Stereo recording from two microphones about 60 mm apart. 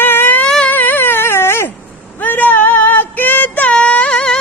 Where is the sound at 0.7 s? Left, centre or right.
Left.